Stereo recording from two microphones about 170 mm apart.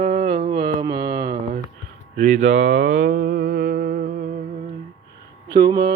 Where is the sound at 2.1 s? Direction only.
45° right (ahead or behind).